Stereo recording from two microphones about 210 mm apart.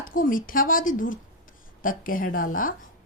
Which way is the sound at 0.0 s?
40° left (ahead or behind).